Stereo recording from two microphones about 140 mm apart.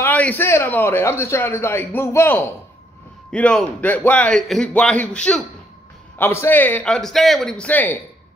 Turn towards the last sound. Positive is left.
turn(degrees=10)  # may be behind; listen again after turning